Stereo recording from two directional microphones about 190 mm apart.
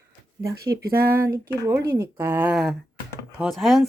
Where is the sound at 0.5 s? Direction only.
55° right (ahead or behind).